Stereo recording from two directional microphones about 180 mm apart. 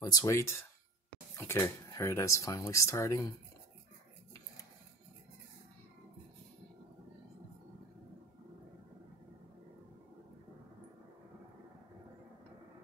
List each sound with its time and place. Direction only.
0.0 s speech: 20° left (ahead or behind)